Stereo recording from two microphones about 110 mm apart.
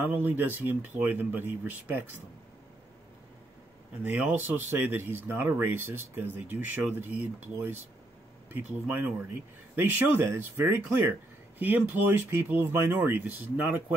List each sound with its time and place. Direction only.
0.0 s speech: 15° right (ahead or behind)
4.0 s speech: 15° right (ahead or behind)